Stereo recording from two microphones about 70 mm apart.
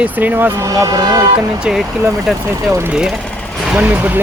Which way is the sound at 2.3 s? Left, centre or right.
Centre.